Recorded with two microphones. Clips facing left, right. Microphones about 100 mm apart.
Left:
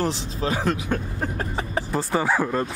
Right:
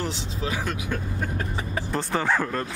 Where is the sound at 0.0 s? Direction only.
40° left (ahead or behind).